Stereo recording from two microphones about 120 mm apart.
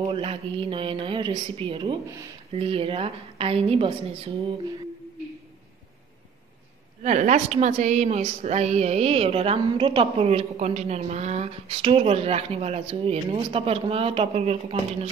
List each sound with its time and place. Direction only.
0.1 s a woman's voice: 50° right (ahead or behind)
7.0 s a woman's voice: 80° right; by 15.0 s 55° right (ahead or behind)